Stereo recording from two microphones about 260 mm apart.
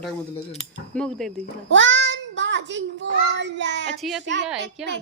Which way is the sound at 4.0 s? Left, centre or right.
Centre.